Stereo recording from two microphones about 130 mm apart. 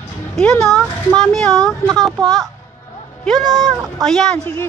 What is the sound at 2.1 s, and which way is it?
Speech, 30° right (ahead or behind).